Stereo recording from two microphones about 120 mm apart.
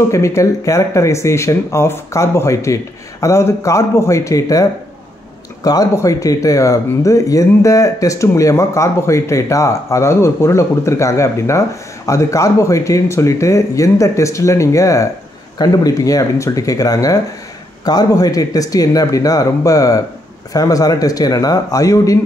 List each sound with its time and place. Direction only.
0.1 s speech: 25° left (ahead or behind)